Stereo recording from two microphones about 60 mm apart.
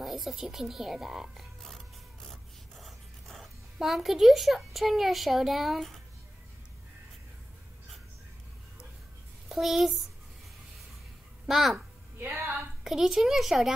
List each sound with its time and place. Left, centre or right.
0.0 s a woman's voice: centre
2.2 s zipper: centre
9.5 s speech: centre
11.4 s a woman's voice: centre
12.2 s a woman's voice: right
12.8 s a woman's voice: centre